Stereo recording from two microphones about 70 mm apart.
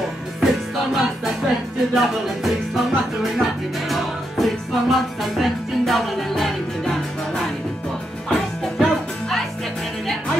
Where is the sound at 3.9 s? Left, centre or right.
Centre.